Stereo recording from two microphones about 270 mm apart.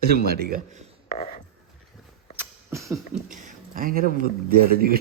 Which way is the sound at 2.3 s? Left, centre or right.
Centre.